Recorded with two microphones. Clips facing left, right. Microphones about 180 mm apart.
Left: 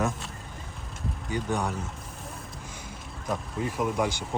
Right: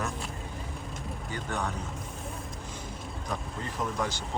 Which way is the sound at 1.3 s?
15° left (ahead or behind).